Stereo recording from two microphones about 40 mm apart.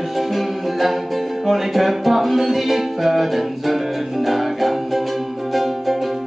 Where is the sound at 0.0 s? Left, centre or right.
Centre.